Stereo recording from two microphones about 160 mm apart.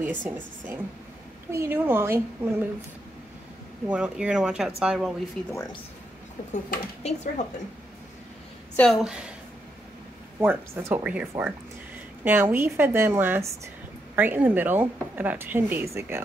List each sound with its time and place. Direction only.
0.0 s speech: 10° right (ahead or behind)
3.8 s speech: 5° right (ahead or behind)
6.5 s speech: 45° left (ahead or behind)
8.7 s speech: centre (ahead or behind)
10.4 s speech: 15° right (ahead or behind)